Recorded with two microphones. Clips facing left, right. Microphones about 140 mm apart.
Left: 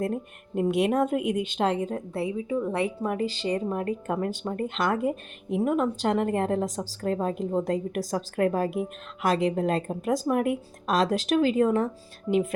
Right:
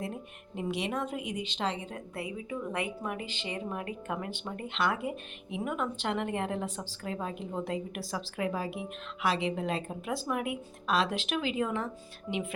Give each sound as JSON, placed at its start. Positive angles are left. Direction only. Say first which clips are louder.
{"t": 0.0, "sound": "a woman's voice", "louder": "left 9 dB", "side_deg": 50}
{"t": 2.1, "sound": "speech", "louder": "left 8 dB", "side_deg": 30}